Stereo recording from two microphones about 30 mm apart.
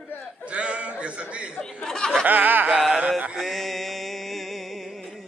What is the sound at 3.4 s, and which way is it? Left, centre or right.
Mantra, centre.